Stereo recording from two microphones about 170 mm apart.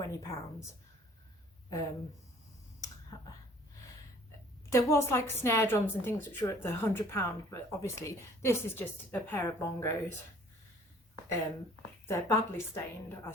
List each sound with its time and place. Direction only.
0.0 s a woman's voice: 15° left (ahead or behind)
4.7 s a woman's voice: 15° left (ahead or behind)
12.0 s a woman's voice: 15° left (ahead or behind)